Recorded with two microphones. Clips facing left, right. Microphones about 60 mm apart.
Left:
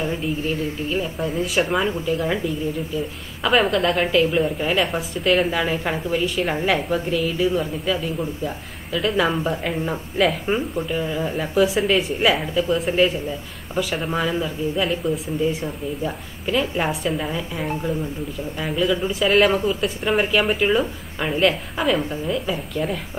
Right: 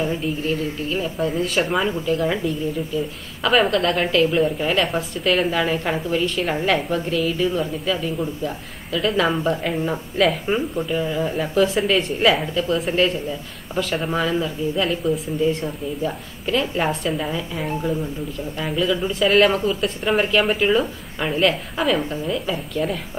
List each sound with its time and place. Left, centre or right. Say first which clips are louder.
0.0 s a woman's voice: right 1 dB; centre